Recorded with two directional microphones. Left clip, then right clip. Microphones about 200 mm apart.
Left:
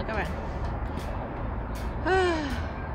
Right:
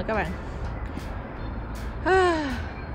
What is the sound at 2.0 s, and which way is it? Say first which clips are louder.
Speech: right 4 dB; 10° left (ahead or behind).